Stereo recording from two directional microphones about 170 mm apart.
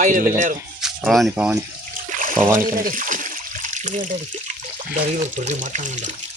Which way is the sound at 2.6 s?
55° right (ahead or behind).